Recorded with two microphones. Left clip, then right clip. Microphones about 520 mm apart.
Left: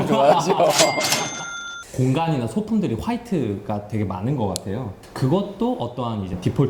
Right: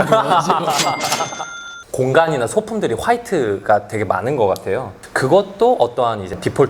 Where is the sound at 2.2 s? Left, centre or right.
Right.